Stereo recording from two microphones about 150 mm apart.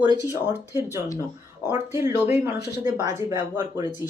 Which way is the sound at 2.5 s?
90° left.